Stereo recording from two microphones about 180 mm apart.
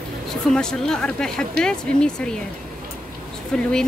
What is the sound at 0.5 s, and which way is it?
Speech, 5° left (ahead or behind).